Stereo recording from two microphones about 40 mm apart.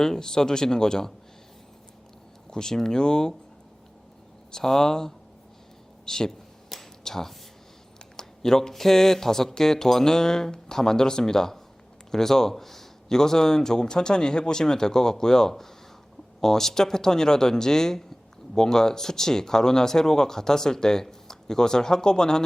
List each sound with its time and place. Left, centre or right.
0.0 s speech: centre
2.5 s speech: centre
4.5 s speech: centre